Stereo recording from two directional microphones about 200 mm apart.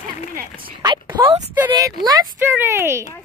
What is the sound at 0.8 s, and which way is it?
Speech, 20° right (ahead or behind).